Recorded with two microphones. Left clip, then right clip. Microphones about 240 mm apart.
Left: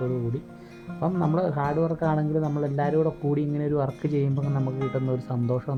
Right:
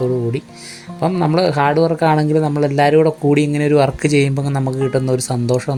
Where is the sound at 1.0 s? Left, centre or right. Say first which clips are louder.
Right 10 dB; left.